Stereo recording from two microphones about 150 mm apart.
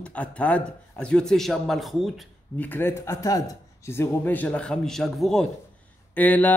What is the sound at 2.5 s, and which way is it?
Speech, 10° left (ahead or behind).